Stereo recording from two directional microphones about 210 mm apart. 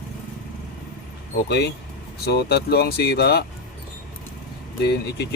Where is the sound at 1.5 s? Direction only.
55° left (ahead or behind).